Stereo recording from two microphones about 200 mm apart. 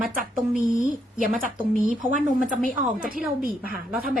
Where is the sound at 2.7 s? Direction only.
45° right (ahead or behind).